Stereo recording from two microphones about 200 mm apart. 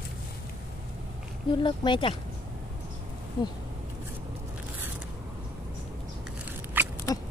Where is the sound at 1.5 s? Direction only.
25° left (ahead or behind).